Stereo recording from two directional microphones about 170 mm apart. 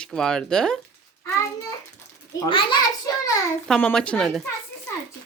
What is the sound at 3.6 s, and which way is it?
Speech, 5° left (ahead or behind).